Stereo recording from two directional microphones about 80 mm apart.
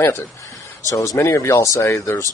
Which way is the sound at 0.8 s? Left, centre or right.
Left.